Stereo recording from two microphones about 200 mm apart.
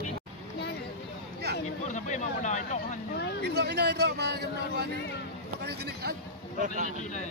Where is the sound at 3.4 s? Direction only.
55° right (ahead or behind).